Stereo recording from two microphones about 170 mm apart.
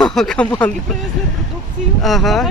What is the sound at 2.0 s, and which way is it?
Speech, centre (ahead or behind).